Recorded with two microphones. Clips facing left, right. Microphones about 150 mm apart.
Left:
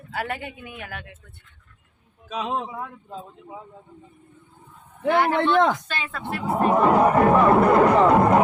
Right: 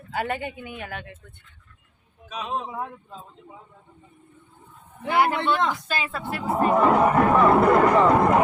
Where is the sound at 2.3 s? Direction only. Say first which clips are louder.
Left 3 dB; 90° left.